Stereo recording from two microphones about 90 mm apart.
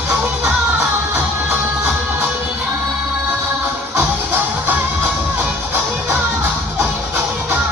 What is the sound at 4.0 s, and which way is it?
Music, 25° right (ahead or behind).